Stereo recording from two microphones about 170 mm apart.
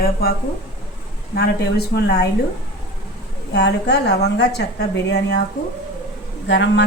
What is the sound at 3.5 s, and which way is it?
A woman's voice, 80° left.